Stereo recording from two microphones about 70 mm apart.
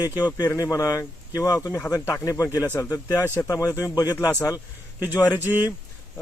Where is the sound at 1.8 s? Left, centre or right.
Left.